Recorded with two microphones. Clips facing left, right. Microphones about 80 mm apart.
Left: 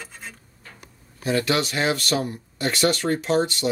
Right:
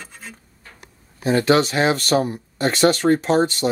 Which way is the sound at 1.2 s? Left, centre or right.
Right.